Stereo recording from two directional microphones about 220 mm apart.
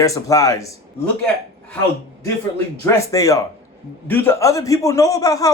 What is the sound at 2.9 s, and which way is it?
Speech, 15° left (ahead or behind).